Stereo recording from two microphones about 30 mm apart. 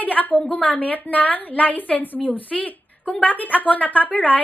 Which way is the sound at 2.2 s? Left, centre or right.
Left.